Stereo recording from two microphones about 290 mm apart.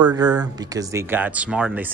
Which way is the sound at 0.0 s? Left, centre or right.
Centre.